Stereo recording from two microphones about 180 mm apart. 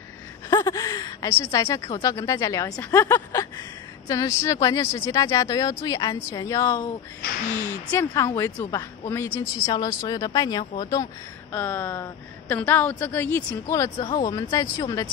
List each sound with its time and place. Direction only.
0.5 s a woman's voice: 20° left (ahead or behind)